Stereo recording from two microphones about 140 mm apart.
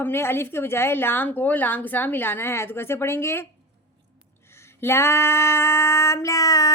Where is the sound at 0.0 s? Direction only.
15° left (ahead or behind).